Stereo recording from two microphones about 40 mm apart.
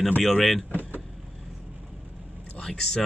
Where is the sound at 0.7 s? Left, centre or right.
Right.